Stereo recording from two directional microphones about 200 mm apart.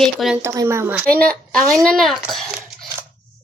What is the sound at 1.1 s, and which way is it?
A woman's voice, 5° left (ahead or behind).